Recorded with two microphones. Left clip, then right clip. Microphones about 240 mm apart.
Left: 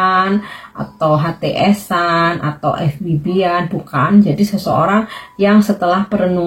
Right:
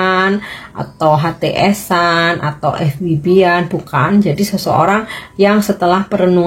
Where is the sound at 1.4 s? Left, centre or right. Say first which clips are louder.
Right 2 dB; right.